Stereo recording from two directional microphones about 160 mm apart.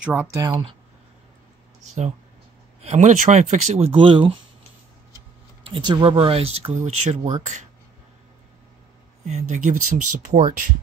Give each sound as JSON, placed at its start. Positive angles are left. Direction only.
{"t": 0.0, "sound": "speech", "side_deg": -10}
{"t": 2.8, "sound": "speech", "side_deg": -45}
{"t": 5.6, "sound": "speech", "side_deg": -30}
{"t": 9.3, "sound": "speech", "side_deg": -45}